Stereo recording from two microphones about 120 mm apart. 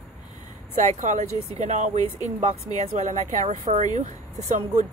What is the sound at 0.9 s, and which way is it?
Speech, 80° right.